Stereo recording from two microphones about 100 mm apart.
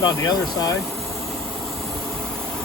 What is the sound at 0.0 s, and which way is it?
Speech, 40° left (ahead or behind).